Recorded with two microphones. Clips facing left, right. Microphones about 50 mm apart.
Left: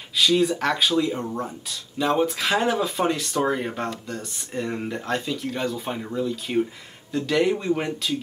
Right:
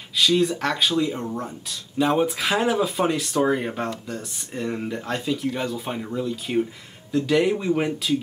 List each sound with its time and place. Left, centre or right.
0.2 s speech: centre